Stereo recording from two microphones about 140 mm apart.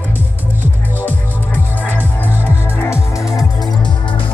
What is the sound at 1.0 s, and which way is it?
Music, 15° left (ahead or behind).